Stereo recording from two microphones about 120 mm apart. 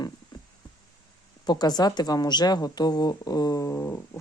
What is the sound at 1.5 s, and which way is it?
A woman's voice, 35° left (ahead or behind).